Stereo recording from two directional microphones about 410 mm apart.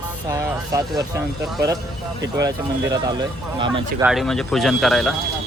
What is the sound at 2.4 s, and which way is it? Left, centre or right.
Speech, centre.